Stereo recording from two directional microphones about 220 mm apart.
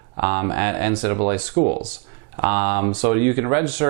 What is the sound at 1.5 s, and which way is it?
Speech, 35° right (ahead or behind).